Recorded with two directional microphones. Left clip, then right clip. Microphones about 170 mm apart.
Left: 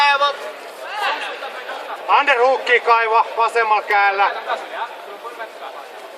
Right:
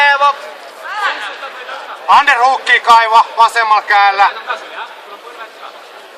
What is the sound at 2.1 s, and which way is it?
A man's voice, 30° right (ahead or behind).